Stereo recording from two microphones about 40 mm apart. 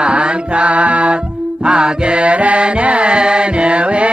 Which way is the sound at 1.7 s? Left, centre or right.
Right.